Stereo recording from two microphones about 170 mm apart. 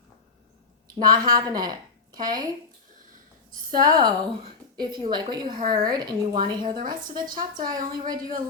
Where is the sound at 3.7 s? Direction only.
55° right (ahead or behind).